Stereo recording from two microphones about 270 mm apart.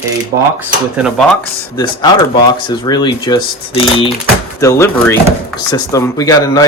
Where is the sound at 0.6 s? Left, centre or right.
Centre.